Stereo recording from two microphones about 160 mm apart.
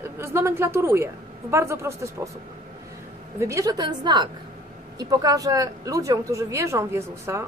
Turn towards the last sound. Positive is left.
turn(degrees=-15)  # may be behind; listen again after turning